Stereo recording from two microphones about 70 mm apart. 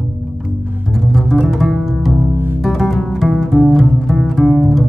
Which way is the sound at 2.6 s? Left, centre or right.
Centre.